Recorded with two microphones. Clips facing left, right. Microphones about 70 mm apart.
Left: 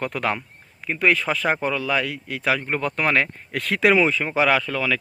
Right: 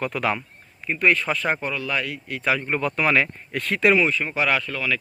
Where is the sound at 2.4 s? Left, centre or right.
Left.